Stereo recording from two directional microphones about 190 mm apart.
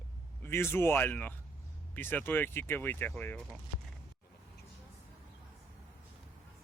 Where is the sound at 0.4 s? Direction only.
10° left (ahead or behind).